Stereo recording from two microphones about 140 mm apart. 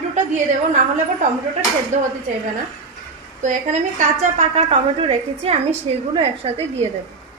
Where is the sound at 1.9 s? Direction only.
60° right (ahead or behind).